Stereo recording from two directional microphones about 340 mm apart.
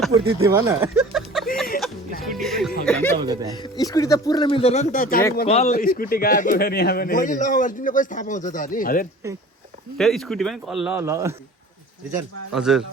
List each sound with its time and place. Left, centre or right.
0.1 s speech: centre
2.3 s music: centre
2.8 s speech: centre
3.2 s speech: centre
3.5 s a man's voice: centre
10.0 s speech: centre
12.5 s speech: centre